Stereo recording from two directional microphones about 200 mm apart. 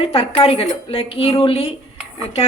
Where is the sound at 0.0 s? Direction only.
30° left (ahead or behind).